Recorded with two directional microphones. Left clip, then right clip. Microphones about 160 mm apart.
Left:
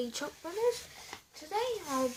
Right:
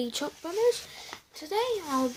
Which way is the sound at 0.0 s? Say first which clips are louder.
Right 5 dB; 40° right (ahead or behind).